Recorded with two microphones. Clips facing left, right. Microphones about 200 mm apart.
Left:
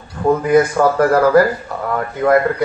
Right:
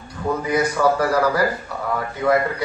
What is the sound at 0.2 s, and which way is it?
A man's voice, 55° left (ahead or behind).